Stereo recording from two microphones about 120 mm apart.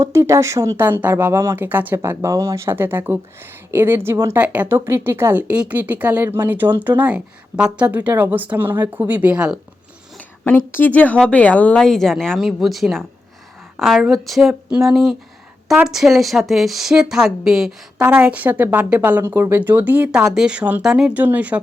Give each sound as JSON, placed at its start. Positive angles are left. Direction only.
{"t": 0.0, "sound": "speech", "side_deg": -25}
{"t": 4.4, "sound": "speech", "side_deg": -10}
{"t": 10.2, "sound": "speech", "side_deg": 15}